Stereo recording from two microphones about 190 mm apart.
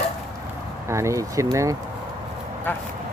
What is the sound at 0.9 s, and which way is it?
Speech, 15° right (ahead or behind).